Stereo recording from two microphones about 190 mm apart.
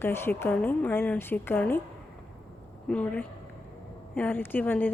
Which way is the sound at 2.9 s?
5° left (ahead or behind).